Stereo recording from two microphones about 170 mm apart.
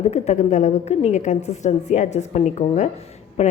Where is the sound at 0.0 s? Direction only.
40° left (ahead or behind).